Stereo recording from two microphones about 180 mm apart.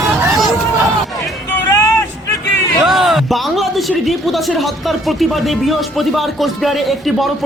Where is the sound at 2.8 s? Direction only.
Centre (ahead or behind).